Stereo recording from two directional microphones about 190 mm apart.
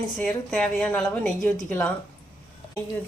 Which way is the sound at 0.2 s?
5° left (ahead or behind).